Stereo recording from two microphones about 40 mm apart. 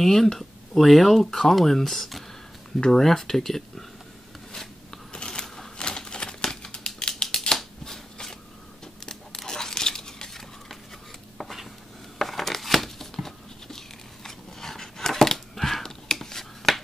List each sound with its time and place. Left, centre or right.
0.0 s speech: centre
5.1 s shuffling cards: left
5.8 s typewriter: left
7.0 s a sound: centre
7.8 s shuffling cards: centre
9.0 s crunch: centre
12.2 s a sound: centre